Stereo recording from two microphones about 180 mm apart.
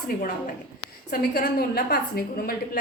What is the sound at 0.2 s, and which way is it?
A woman's voice, 50° left (ahead or behind).